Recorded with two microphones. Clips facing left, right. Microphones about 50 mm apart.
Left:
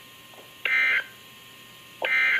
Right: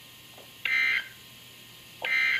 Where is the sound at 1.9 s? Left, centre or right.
Left.